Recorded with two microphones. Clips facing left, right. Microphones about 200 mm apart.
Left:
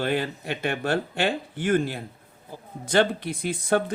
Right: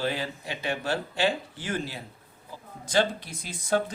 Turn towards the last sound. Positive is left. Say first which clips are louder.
# left 4 dB
turn(degrees=60)  # may be behind; listen again after turning